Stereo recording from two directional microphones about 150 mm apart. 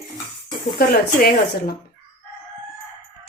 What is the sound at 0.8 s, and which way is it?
Speech, 85° left.